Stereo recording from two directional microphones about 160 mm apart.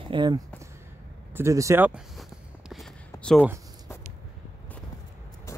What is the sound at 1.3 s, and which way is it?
Speech, 20° right (ahead or behind).